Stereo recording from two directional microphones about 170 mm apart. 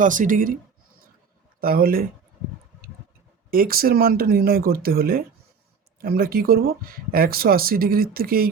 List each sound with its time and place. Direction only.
0.0 s speech: 50° right (ahead or behind)
1.6 s speech: 60° right (ahead or behind)
3.5 s speech: 60° right (ahead or behind)